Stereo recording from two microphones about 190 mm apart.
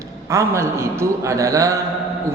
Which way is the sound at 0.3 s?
15° right (ahead or behind).